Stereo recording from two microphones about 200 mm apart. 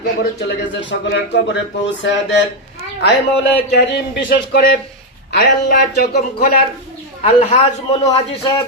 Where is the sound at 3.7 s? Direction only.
55° left (ahead or behind).